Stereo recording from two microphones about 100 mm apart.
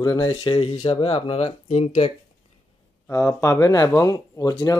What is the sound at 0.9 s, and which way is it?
Speech, 70° left (ahead or behind).